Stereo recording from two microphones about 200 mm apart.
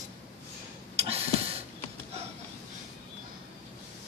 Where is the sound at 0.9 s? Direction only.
30° right (ahead or behind).